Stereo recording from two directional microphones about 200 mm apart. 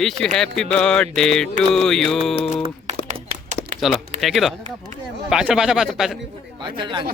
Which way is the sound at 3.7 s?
Centre (ahead or behind).